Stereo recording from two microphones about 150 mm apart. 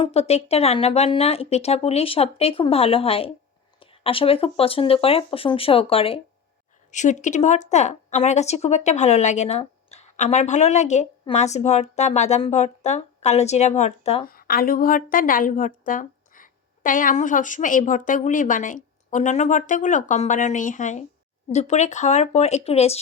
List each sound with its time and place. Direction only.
0.0 s speech: 40° left (ahead or behind)
6.9 s speech: 55° left (ahead or behind)
14.3 s a woman's voice: 75° left (ahead or behind); by 23.0 s 45° left (ahead or behind)